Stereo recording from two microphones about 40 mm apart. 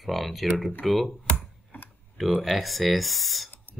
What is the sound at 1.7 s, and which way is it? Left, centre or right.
Tick-tock, left.